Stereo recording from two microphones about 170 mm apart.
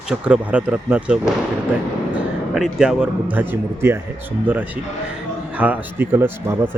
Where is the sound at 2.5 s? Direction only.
Centre (ahead or behind).